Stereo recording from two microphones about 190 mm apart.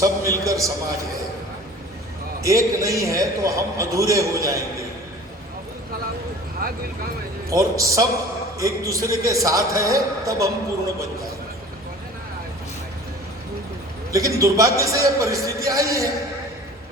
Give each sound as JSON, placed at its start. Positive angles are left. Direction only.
{"t": 0.0, "sound": "a sound", "side_deg": -15}
{"t": 2.4, "sound": "a man's voice", "side_deg": -15}
{"t": 6.6, "sound": "speech", "side_deg": -50}
{"t": 7.5, "sound": "a man's voice", "side_deg": -15}
{"t": 14.1, "sound": "a man's voice", "side_deg": -15}